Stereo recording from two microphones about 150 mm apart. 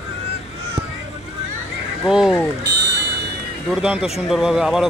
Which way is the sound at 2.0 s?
Centre (ahead or behind).